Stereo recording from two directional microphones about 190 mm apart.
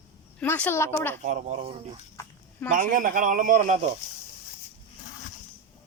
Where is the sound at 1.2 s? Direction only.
40° right (ahead or behind).